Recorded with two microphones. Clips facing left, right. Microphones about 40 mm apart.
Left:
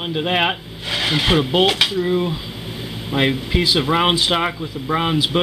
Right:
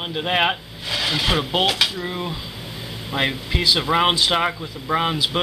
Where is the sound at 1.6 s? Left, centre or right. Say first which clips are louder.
Left 3 dB; centre.